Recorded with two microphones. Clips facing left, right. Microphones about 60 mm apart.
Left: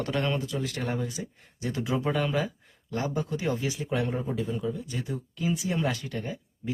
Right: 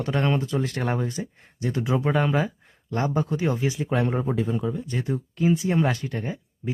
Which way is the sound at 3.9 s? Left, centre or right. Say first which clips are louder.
Right 4 dB; right.